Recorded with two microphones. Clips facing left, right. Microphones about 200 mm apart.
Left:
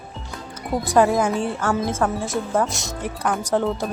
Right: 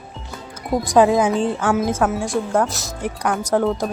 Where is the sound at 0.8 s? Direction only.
15° right (ahead or behind).